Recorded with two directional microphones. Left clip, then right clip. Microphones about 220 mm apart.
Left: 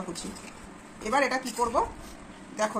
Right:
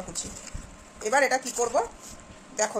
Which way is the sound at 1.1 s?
35° right (ahead or behind).